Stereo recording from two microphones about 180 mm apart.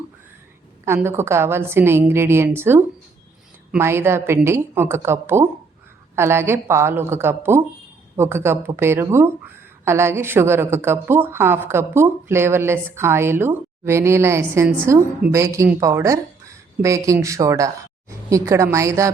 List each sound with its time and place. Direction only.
0.9 s a woman's voice: 15° right (ahead or behind)